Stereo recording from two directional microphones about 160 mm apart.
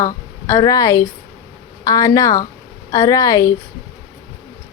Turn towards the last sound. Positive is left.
turn(degrees=20)  # may be behind; listen again after turning